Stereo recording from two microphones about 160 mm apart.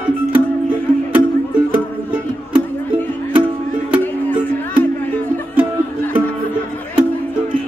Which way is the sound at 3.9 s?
10° right (ahead or behind).